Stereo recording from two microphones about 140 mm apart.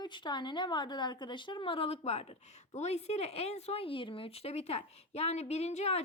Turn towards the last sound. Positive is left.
turn(degrees=50)  # may be behind; listen again after turning